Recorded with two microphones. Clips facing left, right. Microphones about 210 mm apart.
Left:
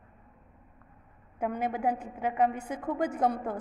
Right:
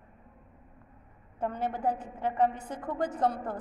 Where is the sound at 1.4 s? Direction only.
10° left (ahead or behind).